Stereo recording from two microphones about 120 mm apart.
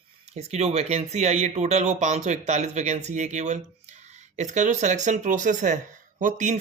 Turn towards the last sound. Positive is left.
turn(degrees=-90)